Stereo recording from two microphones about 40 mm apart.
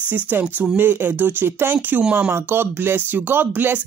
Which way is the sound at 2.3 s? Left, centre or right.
Right.